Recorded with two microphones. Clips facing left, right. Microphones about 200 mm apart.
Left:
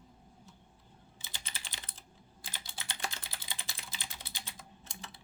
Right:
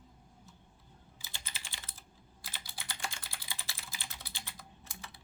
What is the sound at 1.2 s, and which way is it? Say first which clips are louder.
Typing: left 1 dB; 20° left (ahead or behind).